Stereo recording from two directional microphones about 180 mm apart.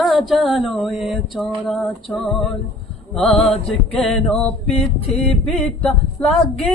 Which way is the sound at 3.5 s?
35° left (ahead or behind).